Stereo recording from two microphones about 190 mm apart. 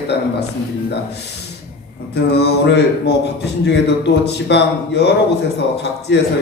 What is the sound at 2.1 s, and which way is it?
A man's voice, 60° left (ahead or behind).